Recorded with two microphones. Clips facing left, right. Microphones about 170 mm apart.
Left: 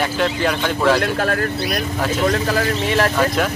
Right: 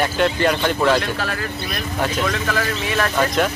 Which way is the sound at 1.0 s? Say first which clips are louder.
Left 5 dB; 50° left (ahead or behind).